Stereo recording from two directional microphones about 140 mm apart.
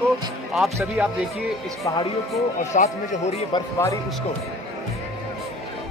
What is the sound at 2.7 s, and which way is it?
Speech, 65° left (ahead or behind).